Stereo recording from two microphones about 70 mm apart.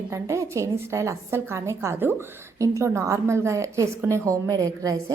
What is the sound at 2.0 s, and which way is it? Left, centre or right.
Speech, right.